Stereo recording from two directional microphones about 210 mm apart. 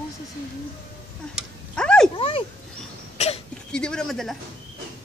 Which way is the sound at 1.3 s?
5° left (ahead or behind).